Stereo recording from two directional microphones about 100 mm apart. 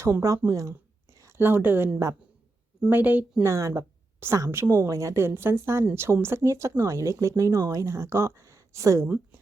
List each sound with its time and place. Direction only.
0.0 s speech: 30° right (ahead or behind)
0.7 s a sound: 30° right (ahead or behind)
2.9 s speech: 20° right (ahead or behind)
3.4 s a woman's voice: 30° right (ahead or behind)
9.0 s a woman's voice: 15° right (ahead or behind)